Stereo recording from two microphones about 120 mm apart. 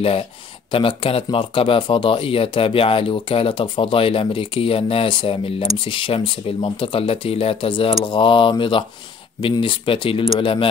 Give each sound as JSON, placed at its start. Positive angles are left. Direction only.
{"t": 0.0, "sound": "speech", "side_deg": 55}